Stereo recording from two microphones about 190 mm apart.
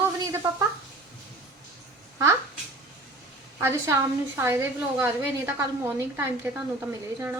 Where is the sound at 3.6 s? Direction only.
15° right (ahead or behind).